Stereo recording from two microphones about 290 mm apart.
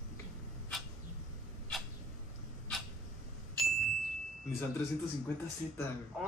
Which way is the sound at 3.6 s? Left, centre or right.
Centre.